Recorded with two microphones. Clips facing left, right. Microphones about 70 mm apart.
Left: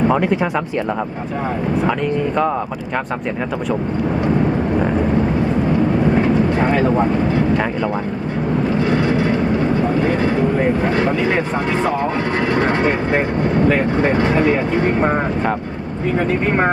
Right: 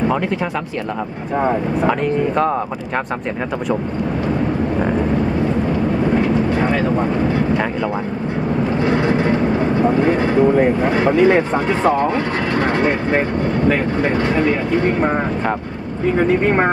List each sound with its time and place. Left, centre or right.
1.9 s speech: centre
10.9 s speech: centre
11.7 s speech: centre
14.0 s speech: centre
16.1 s speech: centre